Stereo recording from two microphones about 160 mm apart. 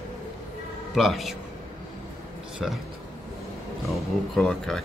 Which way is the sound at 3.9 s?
Centre (ahead or behind).